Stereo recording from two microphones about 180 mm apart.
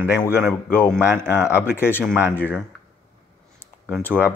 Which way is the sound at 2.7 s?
5° left (ahead or behind).